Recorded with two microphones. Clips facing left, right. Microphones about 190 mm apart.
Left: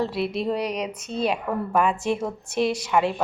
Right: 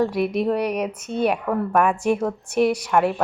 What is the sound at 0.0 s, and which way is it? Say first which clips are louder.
Speech: right 4 dB; 15° right (ahead or behind).